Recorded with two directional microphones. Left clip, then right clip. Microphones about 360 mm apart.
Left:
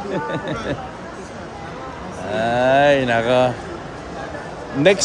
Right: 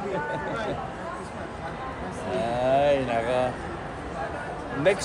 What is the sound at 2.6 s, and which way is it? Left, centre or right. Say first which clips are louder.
Speech: left 7 dB; left.